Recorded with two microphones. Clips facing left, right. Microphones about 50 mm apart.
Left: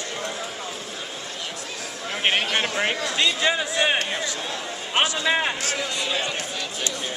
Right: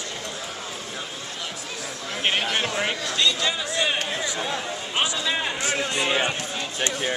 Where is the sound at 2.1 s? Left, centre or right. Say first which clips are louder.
Left 2 dB; centre.